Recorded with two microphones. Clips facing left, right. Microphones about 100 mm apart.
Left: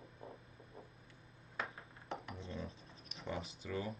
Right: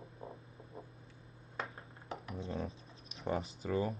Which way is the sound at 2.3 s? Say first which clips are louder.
Right 6 dB; 35° right (ahead or behind).